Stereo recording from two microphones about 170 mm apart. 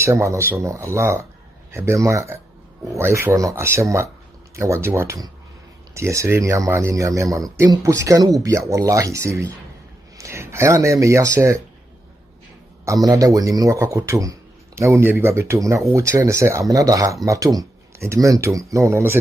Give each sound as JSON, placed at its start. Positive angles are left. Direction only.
{"t": 0.0, "sound": "speech", "side_deg": -15}
{"t": 12.8, "sound": "a man's voice", "side_deg": -20}